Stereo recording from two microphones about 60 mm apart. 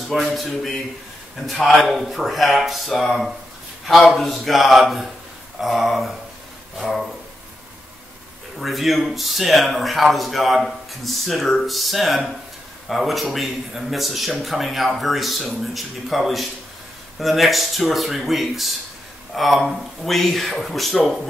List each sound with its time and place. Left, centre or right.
0.1 s speech: centre
8.5 s speech: centre